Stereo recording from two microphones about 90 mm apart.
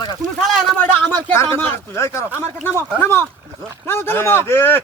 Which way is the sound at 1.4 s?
25° left (ahead or behind).